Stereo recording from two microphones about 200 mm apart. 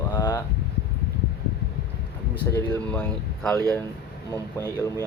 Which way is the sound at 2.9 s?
5° left (ahead or behind).